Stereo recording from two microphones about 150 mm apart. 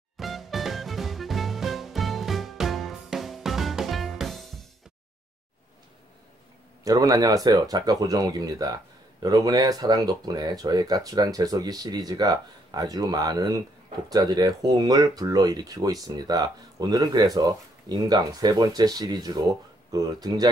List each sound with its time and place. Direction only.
0.2 s music: centre (ahead or behind)
6.8 s speech: 25° right (ahead or behind)